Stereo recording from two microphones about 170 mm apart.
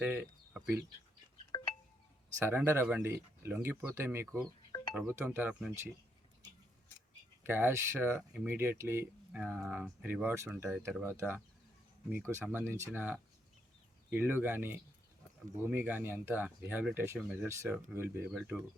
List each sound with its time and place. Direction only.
0.0 s speech: 10° right (ahead or behind)
1.5 s wind chime: 30° left (ahead or behind)
2.4 s speech: 10° right (ahead or behind)
7.4 s speech: 10° right (ahead or behind)